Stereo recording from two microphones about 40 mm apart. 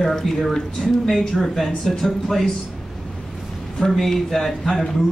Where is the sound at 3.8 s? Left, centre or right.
Centre.